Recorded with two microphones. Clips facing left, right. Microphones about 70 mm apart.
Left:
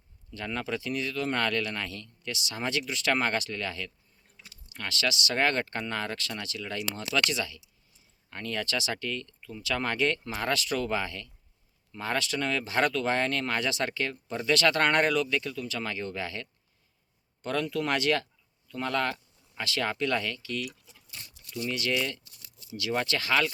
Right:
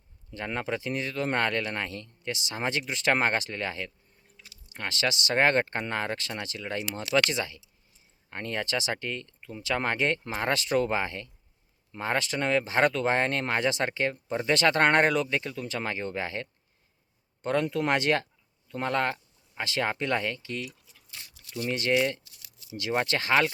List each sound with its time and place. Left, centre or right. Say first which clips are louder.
0.3 s speech: right 2 dB; right